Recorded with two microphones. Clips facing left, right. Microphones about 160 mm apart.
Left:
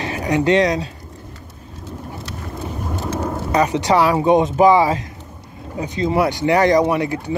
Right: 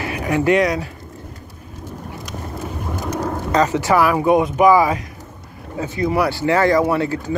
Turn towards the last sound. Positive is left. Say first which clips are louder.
# even
turn(degrees=15)  # may be behind; listen again after turning